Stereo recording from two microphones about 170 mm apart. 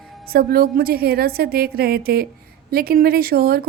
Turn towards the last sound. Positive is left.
turn(degrees=-65)  # may be behind; listen again after turning